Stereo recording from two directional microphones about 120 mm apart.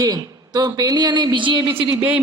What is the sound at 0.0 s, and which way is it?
A woman's voice, 35° right (ahead or behind).